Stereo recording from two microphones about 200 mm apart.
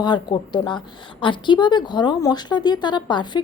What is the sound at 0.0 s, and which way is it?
Speech, 20° left (ahead or behind).